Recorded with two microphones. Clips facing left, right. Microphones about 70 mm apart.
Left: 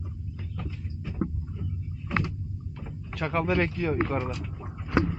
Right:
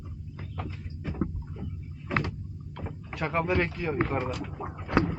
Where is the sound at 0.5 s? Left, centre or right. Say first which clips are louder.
Right 1 dB; right.